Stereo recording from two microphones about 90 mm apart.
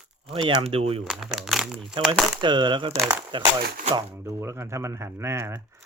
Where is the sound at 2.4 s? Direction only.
60° right (ahead or behind).